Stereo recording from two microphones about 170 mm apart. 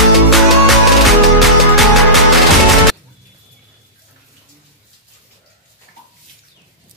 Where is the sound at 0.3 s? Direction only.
Centre (ahead or behind).